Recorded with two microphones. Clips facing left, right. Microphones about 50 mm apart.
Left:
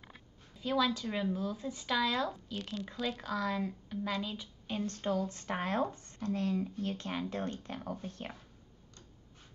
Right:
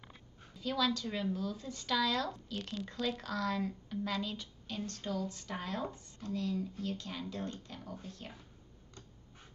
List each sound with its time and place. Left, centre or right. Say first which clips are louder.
0.6 s speech: left 2 dB; centre
4.6 s speech: left 5 dB; left